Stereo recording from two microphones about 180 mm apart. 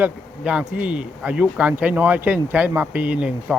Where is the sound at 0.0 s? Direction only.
5° right (ahead or behind).